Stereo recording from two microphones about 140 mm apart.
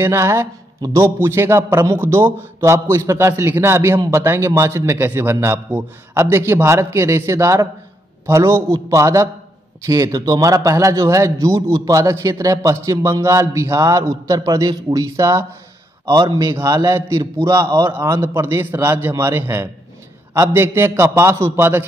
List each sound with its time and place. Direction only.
0.0 s a man's voice: 20° right (ahead or behind)